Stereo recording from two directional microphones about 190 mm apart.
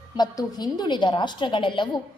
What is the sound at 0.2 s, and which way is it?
A woman's voice, 20° left (ahead or behind).